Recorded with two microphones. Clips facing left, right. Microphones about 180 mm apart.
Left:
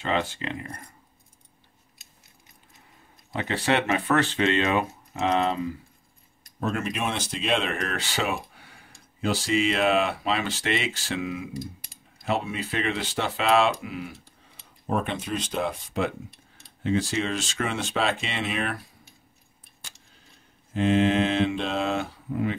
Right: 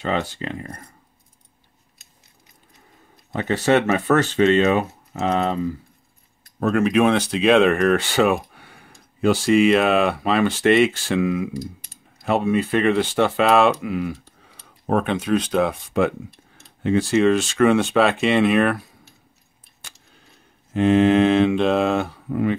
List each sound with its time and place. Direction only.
0.1 s speech: 40° right (ahead or behind)
3.3 s speech: 45° right (ahead or behind)
6.6 s speech: 70° right (ahead or behind)
12.3 s speech: 55° right (ahead or behind)
20.7 s speech: 60° right (ahead or behind)